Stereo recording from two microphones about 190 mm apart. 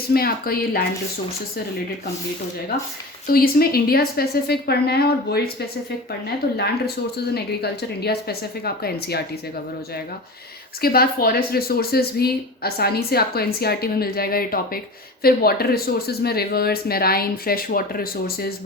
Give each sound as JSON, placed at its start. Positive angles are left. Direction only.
{"t": 0.1, "sound": "speech", "side_deg": 50}
{"t": 3.2, "sound": "a woman's voice", "side_deg": 55}
{"t": 10.8, "sound": "speech", "side_deg": 50}